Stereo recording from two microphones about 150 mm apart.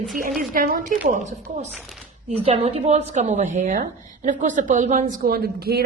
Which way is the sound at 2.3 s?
45° right (ahead or behind).